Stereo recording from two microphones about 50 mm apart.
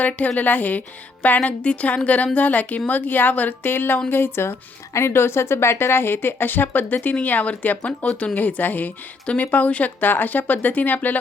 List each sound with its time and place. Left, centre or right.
0.3 s a woman's voice: left
8.0 s a woman's voice: left
8.4 s speech: left
9.2 s a woman's voice: left